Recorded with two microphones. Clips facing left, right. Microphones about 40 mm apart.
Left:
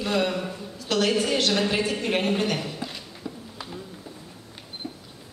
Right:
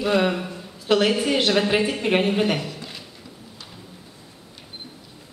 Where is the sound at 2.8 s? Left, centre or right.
Centre.